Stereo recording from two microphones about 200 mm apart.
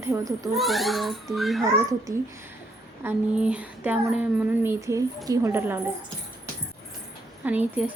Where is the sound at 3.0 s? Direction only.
5° right (ahead or behind).